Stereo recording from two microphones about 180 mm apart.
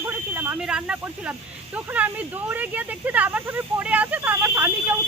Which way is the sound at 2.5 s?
10° right (ahead or behind).